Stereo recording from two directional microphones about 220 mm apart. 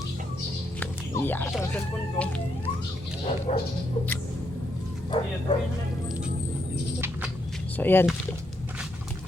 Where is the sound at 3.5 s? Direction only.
30° left (ahead or behind).